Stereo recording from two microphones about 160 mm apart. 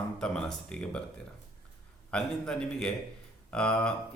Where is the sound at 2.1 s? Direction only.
5° left (ahead or behind).